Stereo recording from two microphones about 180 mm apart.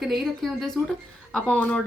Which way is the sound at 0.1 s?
Centre (ahead or behind).